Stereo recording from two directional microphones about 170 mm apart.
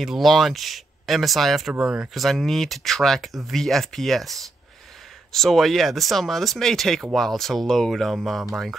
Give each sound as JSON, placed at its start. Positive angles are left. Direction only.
{"t": 0.0, "sound": "speech", "side_deg": 0}